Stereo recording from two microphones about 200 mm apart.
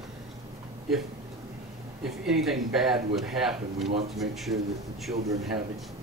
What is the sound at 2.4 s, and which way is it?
Speech, centre (ahead or behind).